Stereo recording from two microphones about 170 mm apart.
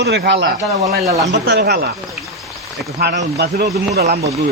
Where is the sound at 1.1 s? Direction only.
20° right (ahead or behind).